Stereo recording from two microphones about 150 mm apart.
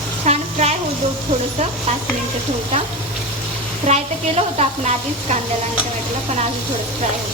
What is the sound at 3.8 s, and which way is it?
A woman's voice, 45° right (ahead or behind).